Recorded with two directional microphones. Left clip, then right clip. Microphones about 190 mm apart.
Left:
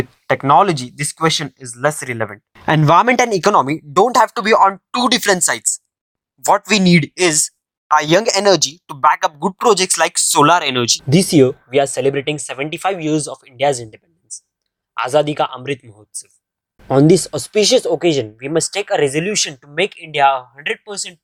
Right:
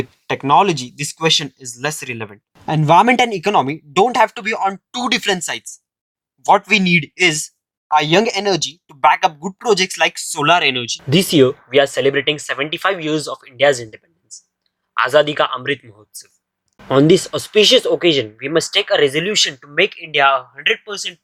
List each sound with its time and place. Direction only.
0.0 s speech: 15° left (ahead or behind); by 4.4 s 35° left (ahead or behind)
4.4 s speech: 10° left (ahead or behind)
4.9 s speech: 35° left (ahead or behind)
11.2 s speech: 25° left (ahead or behind)